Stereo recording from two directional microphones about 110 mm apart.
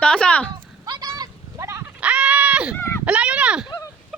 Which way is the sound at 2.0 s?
10° right (ahead or behind).